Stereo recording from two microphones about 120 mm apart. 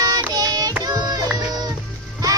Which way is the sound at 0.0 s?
30° right (ahead or behind).